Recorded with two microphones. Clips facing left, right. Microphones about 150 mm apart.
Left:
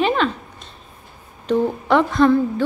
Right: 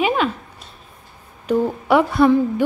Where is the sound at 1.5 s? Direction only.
10° right (ahead or behind).